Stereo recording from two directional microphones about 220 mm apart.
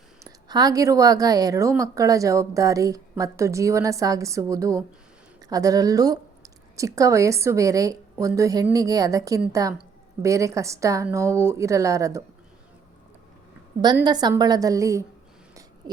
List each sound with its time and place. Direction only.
0.3 s speech: 15° right (ahead or behind)
14.0 s speech: 20° right (ahead or behind)